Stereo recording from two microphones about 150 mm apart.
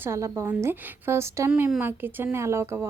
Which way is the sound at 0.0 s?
20° right (ahead or behind).